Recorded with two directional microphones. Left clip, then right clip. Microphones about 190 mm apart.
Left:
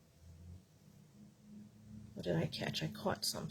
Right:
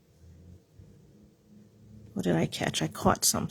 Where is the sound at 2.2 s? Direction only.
50° right (ahead or behind).